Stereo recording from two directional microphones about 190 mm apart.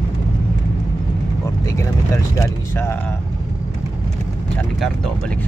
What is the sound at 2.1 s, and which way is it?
Speech, 15° left (ahead or behind).